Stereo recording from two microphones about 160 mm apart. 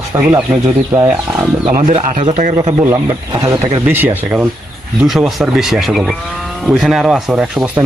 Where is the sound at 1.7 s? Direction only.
50° right (ahead or behind).